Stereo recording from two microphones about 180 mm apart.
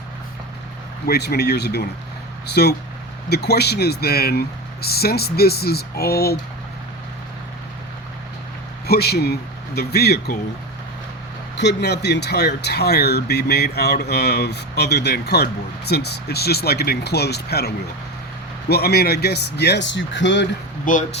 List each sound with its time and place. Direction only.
1.0 s speech: 60° left (ahead or behind)
8.9 s speech: 60° left (ahead or behind)
11.5 s speech: 75° left (ahead or behind)
18.7 s speech: 60° left (ahead or behind); by 20.5 s 85° left
20.8 s speech: 45° left (ahead or behind)